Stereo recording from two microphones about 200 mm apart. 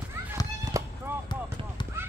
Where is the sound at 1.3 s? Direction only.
20° left (ahead or behind).